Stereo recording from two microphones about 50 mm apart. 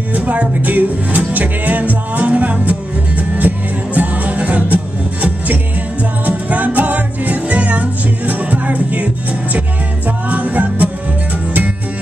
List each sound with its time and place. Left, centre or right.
0.1 s music: right
6.2 s music: right